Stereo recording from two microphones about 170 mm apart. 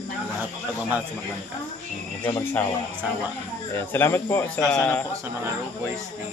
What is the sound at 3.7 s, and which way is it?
Speech, 15° left (ahead or behind).